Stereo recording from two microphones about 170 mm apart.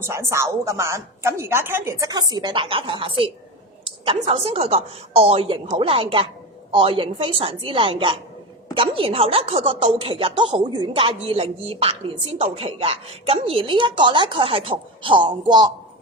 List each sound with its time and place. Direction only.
0.0 s a woman's voice: 15° right (ahead or behind)